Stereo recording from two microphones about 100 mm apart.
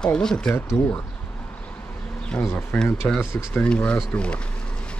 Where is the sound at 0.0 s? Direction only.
5° left (ahead or behind).